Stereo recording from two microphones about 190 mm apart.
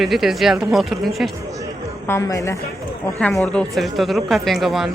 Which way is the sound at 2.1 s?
15° left (ahead or behind).